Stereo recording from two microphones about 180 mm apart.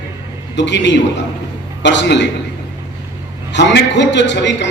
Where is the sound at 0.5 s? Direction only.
75° left (ahead or behind).